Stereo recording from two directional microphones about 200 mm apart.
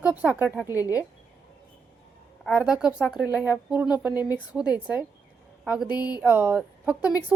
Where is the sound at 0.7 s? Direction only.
15° left (ahead or behind).